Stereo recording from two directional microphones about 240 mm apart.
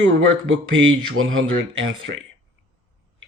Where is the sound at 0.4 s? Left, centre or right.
Right.